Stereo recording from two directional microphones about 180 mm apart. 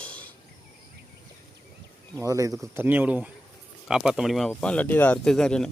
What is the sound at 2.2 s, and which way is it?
Speech, 20° right (ahead or behind).